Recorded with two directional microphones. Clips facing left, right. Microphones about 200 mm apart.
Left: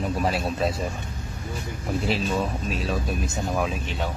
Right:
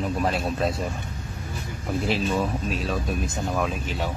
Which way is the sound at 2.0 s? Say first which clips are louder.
Right 1 dB; centre (ahead or behind).